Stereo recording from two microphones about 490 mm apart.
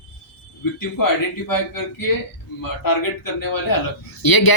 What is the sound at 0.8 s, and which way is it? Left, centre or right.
A man's voice, left.